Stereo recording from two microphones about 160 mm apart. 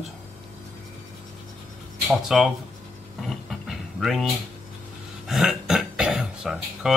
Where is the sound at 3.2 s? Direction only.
Centre (ahead or behind).